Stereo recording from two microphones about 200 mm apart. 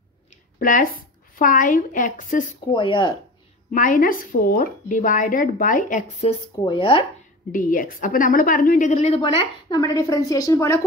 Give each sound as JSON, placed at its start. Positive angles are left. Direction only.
{"t": 0.6, "sound": "a woman's voice", "side_deg": 45}
{"t": 2.7, "sound": "speech", "side_deg": 25}
{"t": 3.7, "sound": "a woman's voice", "side_deg": 40}
{"t": 6.6, "sound": "speech", "side_deg": 25}
{"t": 7.5, "sound": "a woman's voice", "side_deg": 45}